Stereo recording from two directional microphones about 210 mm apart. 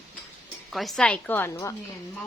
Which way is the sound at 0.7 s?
Centre (ahead or behind).